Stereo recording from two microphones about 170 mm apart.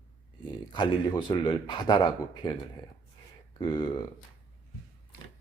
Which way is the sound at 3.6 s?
30° left (ahead or behind).